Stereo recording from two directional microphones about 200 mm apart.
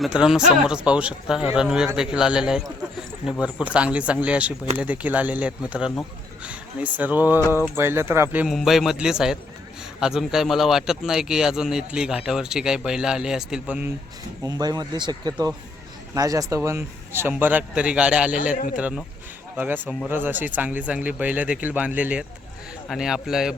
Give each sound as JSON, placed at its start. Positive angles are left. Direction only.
{"t": 0.0, "sound": "a man's voice", "side_deg": -5}
{"t": 14.4, "sound": "speech", "side_deg": -20}
{"t": 18.5, "sound": "a man's voice", "side_deg": 40}
{"t": 18.8, "sound": "a man's voice", "side_deg": -5}